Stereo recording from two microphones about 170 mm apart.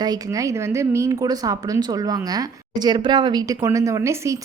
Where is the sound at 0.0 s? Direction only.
20° right (ahead or behind).